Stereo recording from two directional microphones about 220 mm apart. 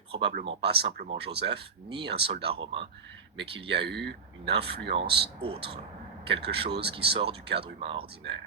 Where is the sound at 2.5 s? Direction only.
25° right (ahead or behind).